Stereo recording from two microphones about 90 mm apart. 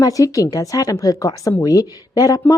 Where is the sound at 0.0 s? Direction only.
40° left (ahead or behind).